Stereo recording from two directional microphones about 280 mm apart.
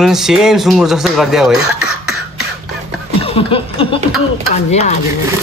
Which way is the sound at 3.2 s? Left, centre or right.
Centre.